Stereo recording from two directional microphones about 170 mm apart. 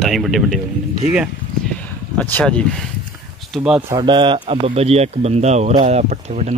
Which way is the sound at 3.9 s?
25° right (ahead or behind).